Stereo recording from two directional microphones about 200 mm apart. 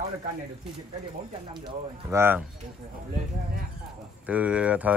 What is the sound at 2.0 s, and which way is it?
Speech, 10° right (ahead or behind).